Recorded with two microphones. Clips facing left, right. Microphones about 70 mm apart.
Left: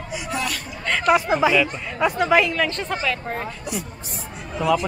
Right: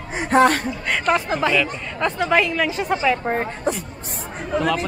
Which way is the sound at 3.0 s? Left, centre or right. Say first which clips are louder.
Right 6 dB; right.